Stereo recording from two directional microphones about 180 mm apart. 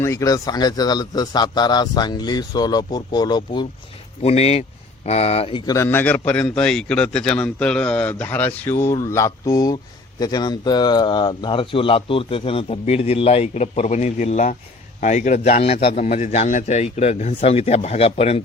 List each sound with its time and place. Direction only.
0.0 s speech: 15° left (ahead or behind)
4.2 s a man's voice: 35° left (ahead or behind)
5.7 s a man's voice: 15° left (ahead or behind); by 18.4 s 35° left (ahead or behind)